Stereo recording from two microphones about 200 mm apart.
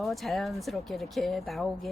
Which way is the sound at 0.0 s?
Centre (ahead or behind).